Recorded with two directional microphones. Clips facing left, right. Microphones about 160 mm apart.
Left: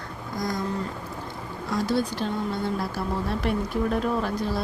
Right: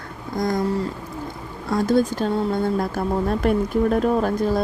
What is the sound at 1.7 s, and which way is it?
Speech, 50° right (ahead or behind).